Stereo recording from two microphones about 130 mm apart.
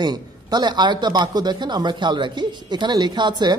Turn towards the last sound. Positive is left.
turn(degrees=-35)  # may be behind; listen again after turning